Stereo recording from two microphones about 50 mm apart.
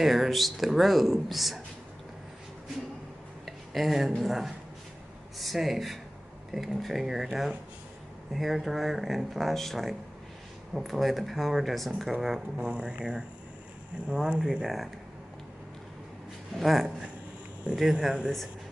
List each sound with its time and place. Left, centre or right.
0.0 s speech: centre
3.4 s a sound: centre
4.2 s speech: centre
8.3 s speech: centre
12.5 s speech: centre
14.4 s speech: centre
16.5 s speech: centre
17.7 s speech: centre